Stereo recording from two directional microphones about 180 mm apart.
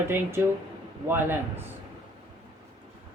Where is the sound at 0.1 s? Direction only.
15° right (ahead or behind).